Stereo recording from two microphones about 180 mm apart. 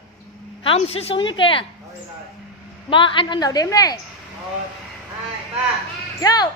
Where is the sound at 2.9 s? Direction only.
30° left (ahead or behind).